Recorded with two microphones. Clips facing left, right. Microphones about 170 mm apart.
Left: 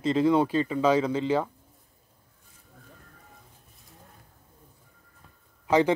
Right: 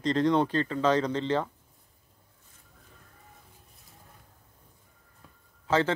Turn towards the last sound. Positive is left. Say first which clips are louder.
# left 4 dB
turn(degrees=15)  # may be behind; listen again after turning